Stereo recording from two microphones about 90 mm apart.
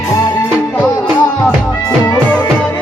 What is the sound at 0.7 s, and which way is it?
Music, 15° left (ahead or behind).